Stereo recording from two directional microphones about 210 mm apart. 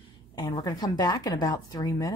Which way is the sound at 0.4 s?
20° left (ahead or behind).